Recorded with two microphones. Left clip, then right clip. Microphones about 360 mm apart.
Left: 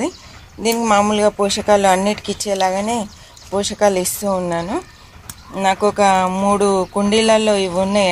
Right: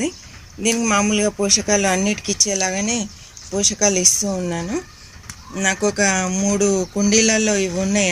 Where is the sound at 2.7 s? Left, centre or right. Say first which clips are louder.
Left 4 dB; left.